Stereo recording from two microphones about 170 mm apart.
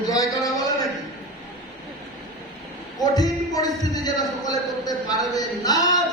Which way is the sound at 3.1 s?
20° left (ahead or behind).